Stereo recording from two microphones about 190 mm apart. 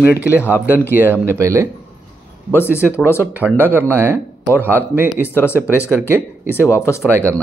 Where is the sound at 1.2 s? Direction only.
15° right (ahead or behind).